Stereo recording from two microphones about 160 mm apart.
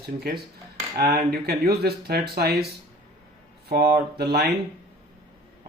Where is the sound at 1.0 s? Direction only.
70° right (ahead or behind).